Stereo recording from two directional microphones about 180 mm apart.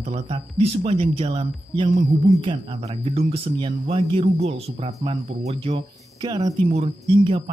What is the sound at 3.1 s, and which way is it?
Speech, 35° right (ahead or behind).